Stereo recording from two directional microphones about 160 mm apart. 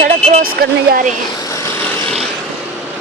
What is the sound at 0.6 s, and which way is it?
Speech, 70° right (ahead or behind).